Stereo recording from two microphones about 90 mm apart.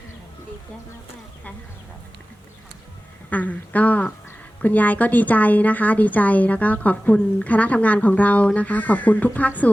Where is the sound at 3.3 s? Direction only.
15° left (ahead or behind).